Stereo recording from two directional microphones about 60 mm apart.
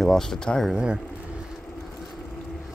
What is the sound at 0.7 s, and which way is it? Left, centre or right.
Speech, centre.